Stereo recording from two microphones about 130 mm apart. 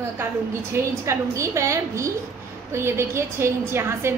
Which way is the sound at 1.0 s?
20° right (ahead or behind).